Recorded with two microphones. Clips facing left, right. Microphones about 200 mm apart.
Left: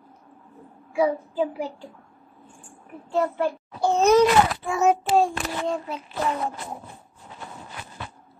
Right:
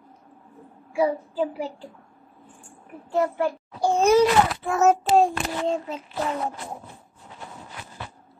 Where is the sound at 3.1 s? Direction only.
15° right (ahead or behind).